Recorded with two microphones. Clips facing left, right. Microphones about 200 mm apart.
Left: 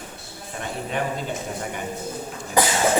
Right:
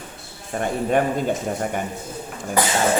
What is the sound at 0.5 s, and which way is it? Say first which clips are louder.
Speech: right 8 dB; 50° right (ahead or behind).